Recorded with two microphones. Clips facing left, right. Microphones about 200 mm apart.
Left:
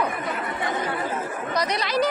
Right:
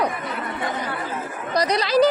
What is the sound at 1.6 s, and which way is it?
Speech, 35° right (ahead or behind).